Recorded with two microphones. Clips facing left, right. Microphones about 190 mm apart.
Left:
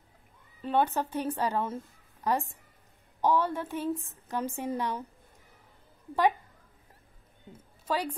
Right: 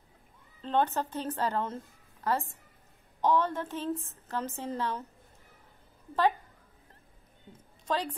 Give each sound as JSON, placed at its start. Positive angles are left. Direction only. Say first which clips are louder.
{"t": 0.6, "sound": "a woman's voice", "louder": "left 1 dB", "side_deg": 10}
{"t": 7.8, "sound": "a woman's voice", "louder": "left 1 dB", "side_deg": 10}